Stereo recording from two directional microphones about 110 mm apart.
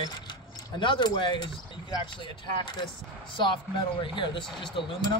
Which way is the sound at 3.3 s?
45° left (ahead or behind).